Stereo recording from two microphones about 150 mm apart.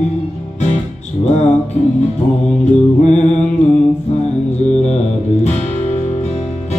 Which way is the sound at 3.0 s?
50° left (ahead or behind).